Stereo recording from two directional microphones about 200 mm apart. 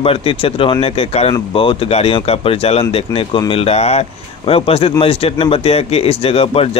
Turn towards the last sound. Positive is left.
turn(degrees=30)  # may be behind; listen again after turning